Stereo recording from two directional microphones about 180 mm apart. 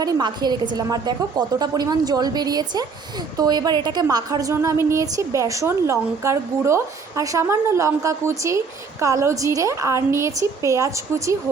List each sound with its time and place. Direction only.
0.0 s a woman's voice: 25° right (ahead or behind)